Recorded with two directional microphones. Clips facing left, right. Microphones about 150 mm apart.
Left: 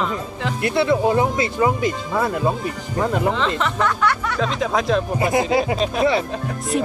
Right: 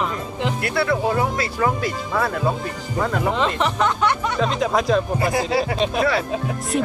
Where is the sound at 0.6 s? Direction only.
20° left (ahead or behind).